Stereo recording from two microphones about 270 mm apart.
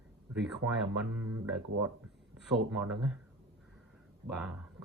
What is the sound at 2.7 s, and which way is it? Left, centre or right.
Speech, centre.